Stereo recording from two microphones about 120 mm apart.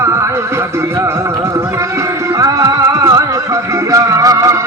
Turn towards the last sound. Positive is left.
turn(degrees=-30)  # may be behind; listen again after turning